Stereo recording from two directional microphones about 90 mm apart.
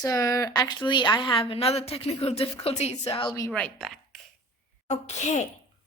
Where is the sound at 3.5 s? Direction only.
10° left (ahead or behind).